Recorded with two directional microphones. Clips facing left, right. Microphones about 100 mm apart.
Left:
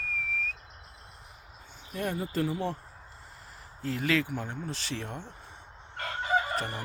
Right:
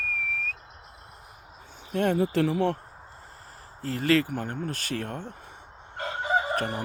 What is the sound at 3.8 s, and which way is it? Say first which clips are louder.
Speech: right 5 dB; 40° right (ahead or behind).